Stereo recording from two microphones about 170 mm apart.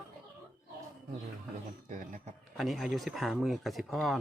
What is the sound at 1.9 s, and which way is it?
Speech, 50° right (ahead or behind).